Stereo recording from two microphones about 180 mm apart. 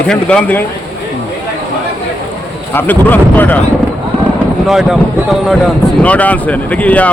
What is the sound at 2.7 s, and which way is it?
Speech, 10° left (ahead or behind).